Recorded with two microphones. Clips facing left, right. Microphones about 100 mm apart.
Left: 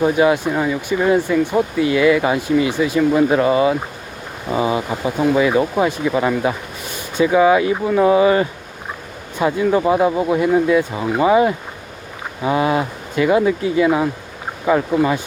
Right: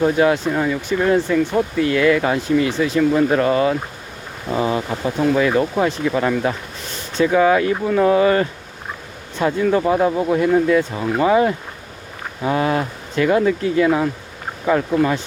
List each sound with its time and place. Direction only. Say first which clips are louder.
0.0 s speech: left 1 dB; 10° left (ahead or behind)